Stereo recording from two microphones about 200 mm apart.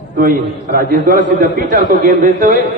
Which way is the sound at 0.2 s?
45° right (ahead or behind).